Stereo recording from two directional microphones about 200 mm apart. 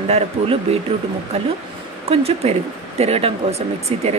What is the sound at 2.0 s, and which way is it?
Speech, 30° right (ahead or behind).